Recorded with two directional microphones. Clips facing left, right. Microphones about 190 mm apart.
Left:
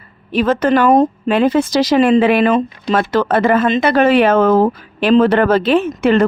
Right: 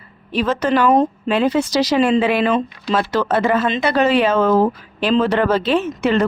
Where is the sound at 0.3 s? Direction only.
55° left (ahead or behind).